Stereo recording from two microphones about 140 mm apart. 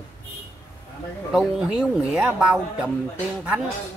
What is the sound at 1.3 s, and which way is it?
Speech, 5° right (ahead or behind).